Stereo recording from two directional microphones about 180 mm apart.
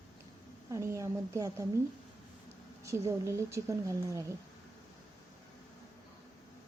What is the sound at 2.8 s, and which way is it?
A woman's voice, 15° right (ahead or behind).